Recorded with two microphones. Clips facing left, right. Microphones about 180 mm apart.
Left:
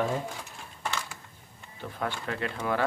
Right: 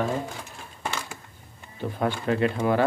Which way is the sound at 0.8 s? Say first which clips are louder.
Right 2 dB; 15° right (ahead or behind).